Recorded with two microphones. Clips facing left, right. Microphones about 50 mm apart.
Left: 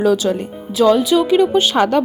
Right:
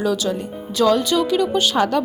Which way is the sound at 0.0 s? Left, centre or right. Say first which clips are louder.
Left 5 dB; left.